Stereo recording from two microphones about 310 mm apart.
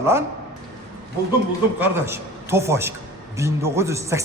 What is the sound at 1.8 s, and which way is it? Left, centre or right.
A man's voice, centre.